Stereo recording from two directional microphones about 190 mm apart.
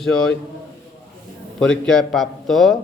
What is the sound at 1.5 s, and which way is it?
A man's voice, 5° left (ahead or behind).